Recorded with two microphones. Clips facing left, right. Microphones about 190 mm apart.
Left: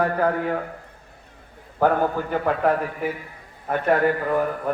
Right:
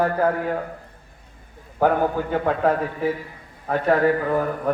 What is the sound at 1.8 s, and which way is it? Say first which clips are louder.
Speech: right 1 dB; 15° right (ahead or behind).